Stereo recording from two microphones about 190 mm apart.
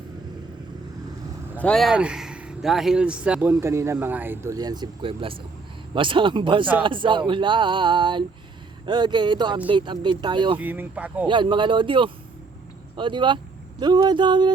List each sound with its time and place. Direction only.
1.5 s speech: 5° left (ahead or behind); by 10.6 s 25° right (ahead or behind)
10.6 s speech: 10° right (ahead or behind)
11.3 s speech: 25° right (ahead or behind)